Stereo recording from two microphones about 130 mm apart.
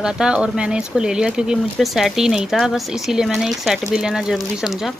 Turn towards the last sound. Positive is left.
turn(degrees=0)  # may be behind; listen again after turning